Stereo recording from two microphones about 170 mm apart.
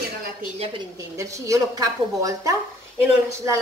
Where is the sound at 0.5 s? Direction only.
35° right (ahead or behind).